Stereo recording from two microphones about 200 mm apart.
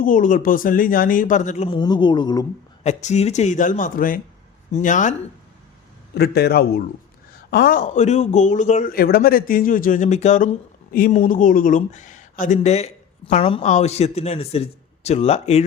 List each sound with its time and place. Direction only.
0.0 s speech: 40° left (ahead or behind); by 2.5 s 20° left (ahead or behind)
2.8 s speech: 35° left (ahead or behind)
6.1 s a man's voice: 55° left (ahead or behind); by 15.6 s 30° left (ahead or behind)